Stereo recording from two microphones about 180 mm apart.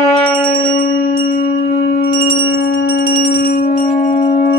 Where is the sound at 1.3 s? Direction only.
55° left (ahead or behind).